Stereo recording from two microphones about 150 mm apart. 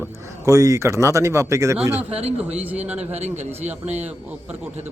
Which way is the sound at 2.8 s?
45° right (ahead or behind).